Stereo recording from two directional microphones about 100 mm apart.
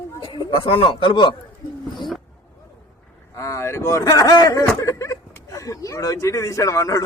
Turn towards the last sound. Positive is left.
turn(degrees=35)  # may be behind; listen again after turning